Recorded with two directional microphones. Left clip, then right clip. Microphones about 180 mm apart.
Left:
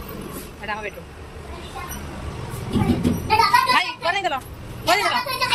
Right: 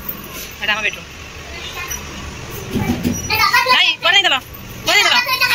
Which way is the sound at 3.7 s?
Centre (ahead or behind).